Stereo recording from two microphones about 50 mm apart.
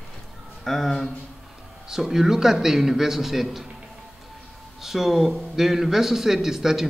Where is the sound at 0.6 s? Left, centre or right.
Centre.